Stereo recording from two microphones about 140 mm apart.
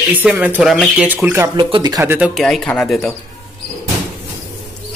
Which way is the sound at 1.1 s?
15° right (ahead or behind).